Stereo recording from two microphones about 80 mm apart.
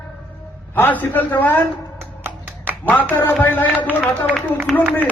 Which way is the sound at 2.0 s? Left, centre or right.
Right.